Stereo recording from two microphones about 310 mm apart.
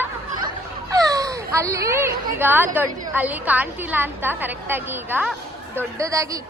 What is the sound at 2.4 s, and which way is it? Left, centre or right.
A woman's voice, centre.